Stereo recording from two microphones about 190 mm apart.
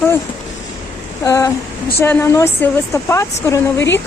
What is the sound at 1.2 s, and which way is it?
Speech, 15° left (ahead or behind).